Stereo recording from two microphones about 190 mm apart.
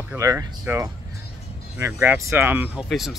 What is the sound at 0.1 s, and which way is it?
Speech, 15° right (ahead or behind).